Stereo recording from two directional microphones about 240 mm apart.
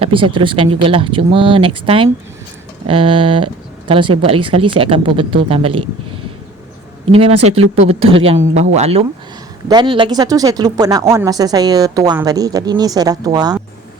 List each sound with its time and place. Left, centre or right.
0.0 s speech: right
2.8 s speech: right
7.1 s speech: right